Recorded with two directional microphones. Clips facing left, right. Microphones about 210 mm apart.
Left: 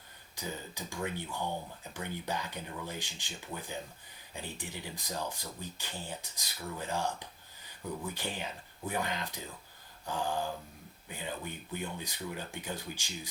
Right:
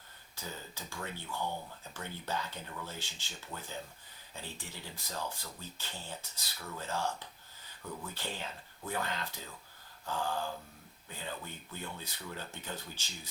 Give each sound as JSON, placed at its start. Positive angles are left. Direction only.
{"t": 0.3, "sound": "speech", "side_deg": 15}